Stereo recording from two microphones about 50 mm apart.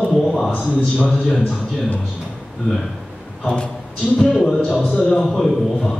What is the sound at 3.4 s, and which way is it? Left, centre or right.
Speech, left.